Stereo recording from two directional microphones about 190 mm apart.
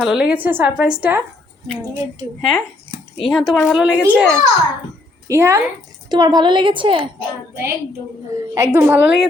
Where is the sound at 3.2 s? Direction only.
Centre (ahead or behind).